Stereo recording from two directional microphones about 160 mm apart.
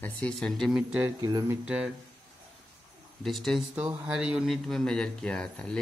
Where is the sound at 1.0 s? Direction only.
20° right (ahead or behind).